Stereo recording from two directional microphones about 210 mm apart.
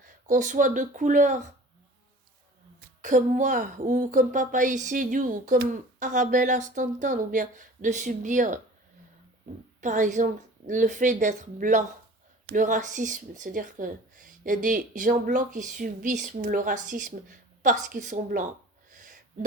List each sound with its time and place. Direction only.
0.0 s speech: 40° right (ahead or behind)
3.0 s speech: 40° right (ahead or behind)
9.8 s speech: 35° right (ahead or behind)
18.9 s a sound: 40° right (ahead or behind)